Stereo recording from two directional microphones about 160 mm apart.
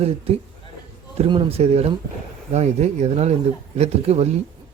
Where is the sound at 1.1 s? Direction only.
35° right (ahead or behind).